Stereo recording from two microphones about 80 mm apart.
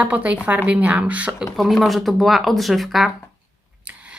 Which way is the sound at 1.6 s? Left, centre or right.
Centre.